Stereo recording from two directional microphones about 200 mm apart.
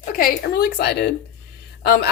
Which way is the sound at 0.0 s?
45° left (ahead or behind).